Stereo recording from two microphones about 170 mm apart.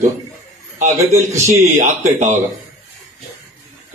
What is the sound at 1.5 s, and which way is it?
Speech, 45° right (ahead or behind).